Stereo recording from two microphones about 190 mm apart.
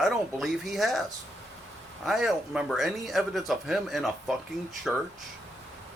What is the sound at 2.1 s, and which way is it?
Speech, centre (ahead or behind).